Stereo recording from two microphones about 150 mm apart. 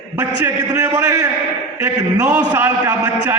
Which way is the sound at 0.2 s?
25° right (ahead or behind).